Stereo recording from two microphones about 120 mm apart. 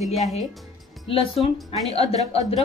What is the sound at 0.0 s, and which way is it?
Speech, centre (ahead or behind).